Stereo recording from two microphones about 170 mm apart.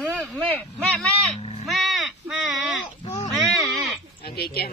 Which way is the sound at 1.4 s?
35° left (ahead or behind).